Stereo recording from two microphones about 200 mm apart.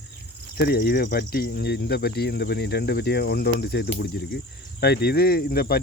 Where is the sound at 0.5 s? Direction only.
50° left (ahead or behind).